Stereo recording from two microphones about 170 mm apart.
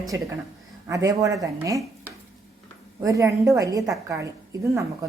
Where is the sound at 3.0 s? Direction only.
20° right (ahead or behind).